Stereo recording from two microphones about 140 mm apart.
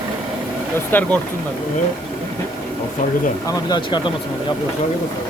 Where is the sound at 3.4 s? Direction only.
35° left (ahead or behind).